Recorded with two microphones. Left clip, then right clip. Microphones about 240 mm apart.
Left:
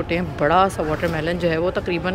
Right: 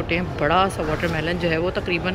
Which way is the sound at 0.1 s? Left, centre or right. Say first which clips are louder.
Left 2 dB; centre.